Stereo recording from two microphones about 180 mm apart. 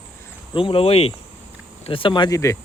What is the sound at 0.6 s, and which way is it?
Speech, 30° left (ahead or behind).